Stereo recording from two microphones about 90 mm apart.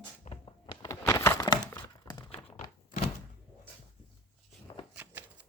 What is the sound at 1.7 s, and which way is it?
Crumpling, 50° left (ahead or behind).